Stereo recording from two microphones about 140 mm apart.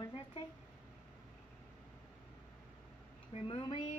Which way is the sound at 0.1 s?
40° left (ahead or behind).